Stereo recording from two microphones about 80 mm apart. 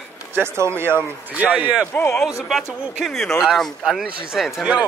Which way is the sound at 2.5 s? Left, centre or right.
Centre.